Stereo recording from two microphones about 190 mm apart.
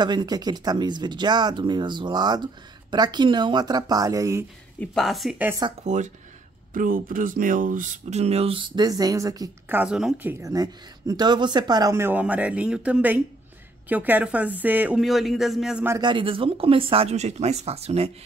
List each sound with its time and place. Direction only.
0.0 s speech: 25° right (ahead or behind)
4.7 s speech: centre (ahead or behind)
5.9 s speech: 40° right (ahead or behind); by 9.8 s 20° right (ahead or behind)
9.8 s a woman's voice: 5° right (ahead or behind)
15.9 s speech: 25° right (ahead or behind)